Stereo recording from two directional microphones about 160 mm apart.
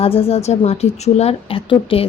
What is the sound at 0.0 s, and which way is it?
A woman's voice, 35° left (ahead or behind).